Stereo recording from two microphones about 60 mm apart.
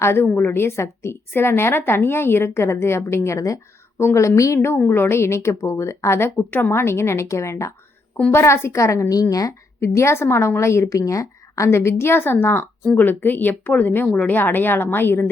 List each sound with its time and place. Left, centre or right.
0.0 s a woman's voice: left
3.9 s a woman's voice: left
9.3 s speech: left
9.8 s a woman's voice: left
11.7 s a woman's voice: left